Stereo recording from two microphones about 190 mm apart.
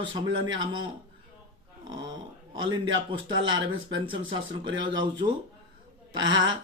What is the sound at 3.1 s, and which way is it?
Speech, 25° right (ahead or behind).